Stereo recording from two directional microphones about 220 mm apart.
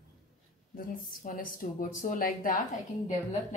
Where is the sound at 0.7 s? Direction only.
40° left (ahead or behind).